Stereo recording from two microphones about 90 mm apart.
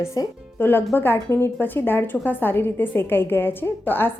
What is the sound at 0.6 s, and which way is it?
A woman's voice, 25° left (ahead or behind).